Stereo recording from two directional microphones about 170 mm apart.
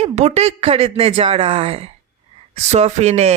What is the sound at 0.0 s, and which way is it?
Speech, 40° right (ahead or behind).